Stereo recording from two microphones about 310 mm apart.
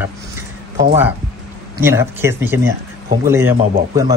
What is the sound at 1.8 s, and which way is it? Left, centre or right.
Speech, centre.